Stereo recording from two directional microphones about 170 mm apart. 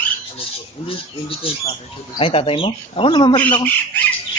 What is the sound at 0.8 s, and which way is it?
Speech, 30° left (ahead or behind).